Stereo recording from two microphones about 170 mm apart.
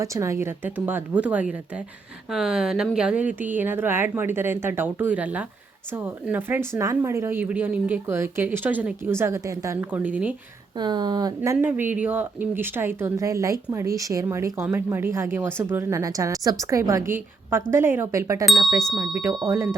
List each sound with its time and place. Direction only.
0.0 s speech: 15° right (ahead or behind)
10.8 s speech: 25° right (ahead or behind)
11.6 s speech: 10° right (ahead or behind)
18.4 s speech: centre (ahead or behind)
19.2 s speech: 20° right (ahead or behind)